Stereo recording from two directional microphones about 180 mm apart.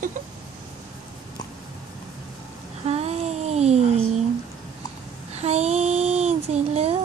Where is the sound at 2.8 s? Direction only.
35° right (ahead or behind).